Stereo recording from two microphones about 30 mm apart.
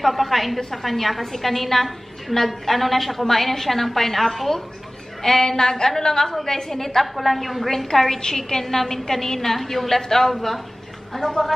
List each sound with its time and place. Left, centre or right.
0.0 s a woman's voice: centre